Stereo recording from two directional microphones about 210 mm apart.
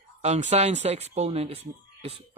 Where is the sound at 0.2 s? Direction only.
30° right (ahead or behind).